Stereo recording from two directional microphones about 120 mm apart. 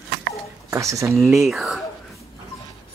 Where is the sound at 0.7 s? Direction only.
25° right (ahead or behind).